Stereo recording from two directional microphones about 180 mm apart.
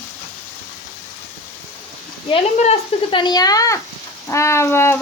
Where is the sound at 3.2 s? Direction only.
20° left (ahead or behind).